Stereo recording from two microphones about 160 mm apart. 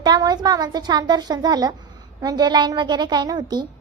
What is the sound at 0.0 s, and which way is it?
A woman's voice, 25° right (ahead or behind).